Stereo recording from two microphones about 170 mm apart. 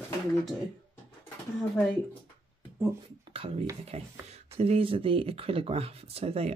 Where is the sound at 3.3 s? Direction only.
30° right (ahead or behind).